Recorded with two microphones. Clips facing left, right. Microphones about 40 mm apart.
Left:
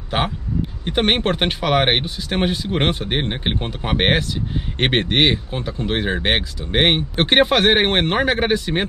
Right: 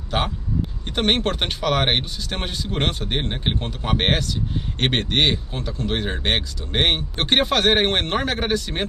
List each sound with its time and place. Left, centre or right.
0.1 s speech: centre